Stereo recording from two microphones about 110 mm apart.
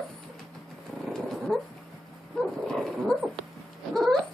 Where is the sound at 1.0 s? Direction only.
Centre (ahead or behind).